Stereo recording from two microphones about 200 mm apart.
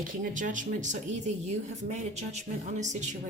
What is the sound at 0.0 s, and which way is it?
Speech, 40° right (ahead or behind).